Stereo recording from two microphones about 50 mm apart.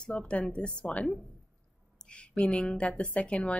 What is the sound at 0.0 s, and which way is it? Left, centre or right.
A woman's voice, left.